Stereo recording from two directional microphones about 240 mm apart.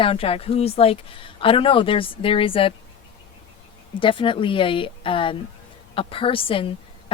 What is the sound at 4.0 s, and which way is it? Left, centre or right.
A woman's voice, left.